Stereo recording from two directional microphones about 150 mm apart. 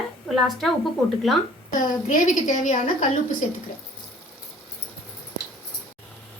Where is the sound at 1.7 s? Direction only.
60° left (ahead or behind).